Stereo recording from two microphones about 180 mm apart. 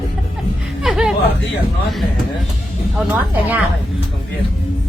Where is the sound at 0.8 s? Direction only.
5° right (ahead or behind).